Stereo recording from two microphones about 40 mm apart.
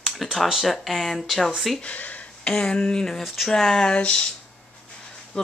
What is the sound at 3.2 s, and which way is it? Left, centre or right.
Speech, centre.